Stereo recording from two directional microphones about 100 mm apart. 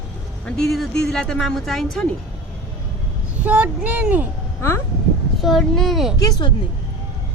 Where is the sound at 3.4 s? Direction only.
15° right (ahead or behind).